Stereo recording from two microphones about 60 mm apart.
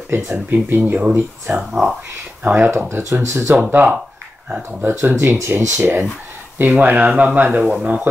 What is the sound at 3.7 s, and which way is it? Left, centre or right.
Speech, right.